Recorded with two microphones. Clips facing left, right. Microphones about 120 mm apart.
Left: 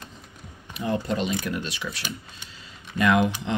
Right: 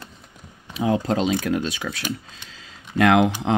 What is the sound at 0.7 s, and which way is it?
Speech, 90° right.